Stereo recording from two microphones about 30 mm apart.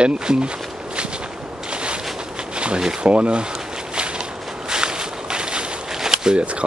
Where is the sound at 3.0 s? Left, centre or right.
Right.